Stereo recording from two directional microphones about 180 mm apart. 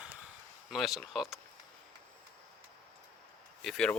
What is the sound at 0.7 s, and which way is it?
Speech, centre (ahead or behind).